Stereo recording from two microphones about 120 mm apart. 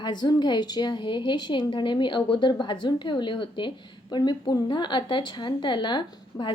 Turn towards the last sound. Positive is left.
turn(degrees=40)  # may be behind; listen again after turning